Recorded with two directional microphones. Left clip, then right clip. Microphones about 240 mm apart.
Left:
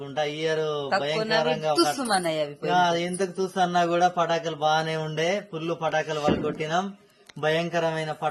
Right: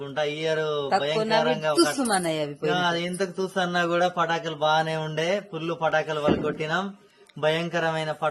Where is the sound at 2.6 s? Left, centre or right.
Centre.